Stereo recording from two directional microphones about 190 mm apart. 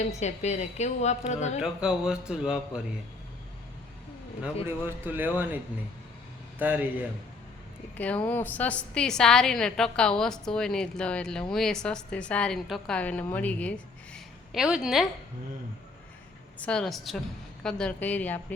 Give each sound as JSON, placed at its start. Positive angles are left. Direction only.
{"t": 0.1, "sound": "a woman's voice", "side_deg": 35}
{"t": 1.6, "sound": "a woman's voice", "side_deg": -5}
{"t": 4.6, "sound": "a man's voice", "side_deg": -10}
{"t": 6.6, "sound": "a man's voice", "side_deg": -10}
{"t": 7.9, "sound": "a woman's voice", "side_deg": 5}
{"t": 16.6, "sound": "a woman's voice", "side_deg": 5}